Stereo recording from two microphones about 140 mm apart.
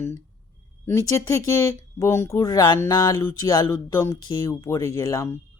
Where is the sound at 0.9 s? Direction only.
20° left (ahead or behind).